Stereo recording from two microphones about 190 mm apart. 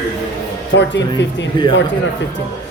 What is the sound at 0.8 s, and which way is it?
Speech, 70° left (ahead or behind).